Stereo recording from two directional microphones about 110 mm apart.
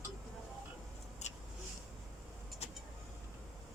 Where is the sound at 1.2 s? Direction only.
90° left.